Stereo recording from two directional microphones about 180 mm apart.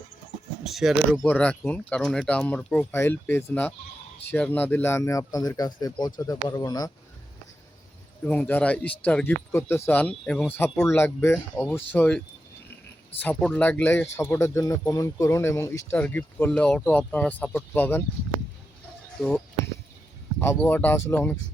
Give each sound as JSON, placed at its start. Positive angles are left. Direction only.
{"t": 0.6, "sound": "speech", "side_deg": 0}
{"t": 8.2, "sound": "speech", "side_deg": 10}
{"t": 13.2, "sound": "speech", "side_deg": 10}
{"t": 19.2, "sound": "speech", "side_deg": 0}
{"t": 20.4, "sound": "speech", "side_deg": 15}